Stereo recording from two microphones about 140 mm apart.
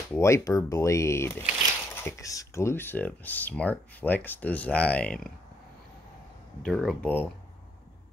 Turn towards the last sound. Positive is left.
turn(degrees=10)  # may be behind; listen again after turning